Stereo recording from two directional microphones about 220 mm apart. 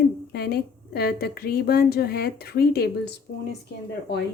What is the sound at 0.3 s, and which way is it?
A woman's voice, 45° left (ahead or behind).